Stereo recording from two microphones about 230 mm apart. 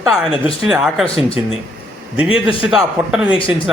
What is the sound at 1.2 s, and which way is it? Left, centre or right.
Speech, left.